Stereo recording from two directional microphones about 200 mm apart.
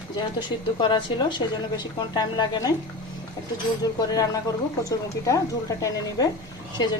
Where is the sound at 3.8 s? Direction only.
15° left (ahead or behind).